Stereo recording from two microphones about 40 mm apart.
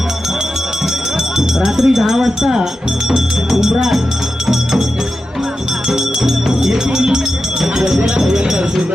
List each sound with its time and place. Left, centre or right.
1.4 s speech: centre
3.7 s speech: centre
5.9 s music: centre
8.0 s chink: centre